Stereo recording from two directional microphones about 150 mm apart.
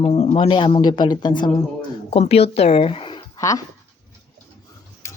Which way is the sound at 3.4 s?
20° left (ahead or behind).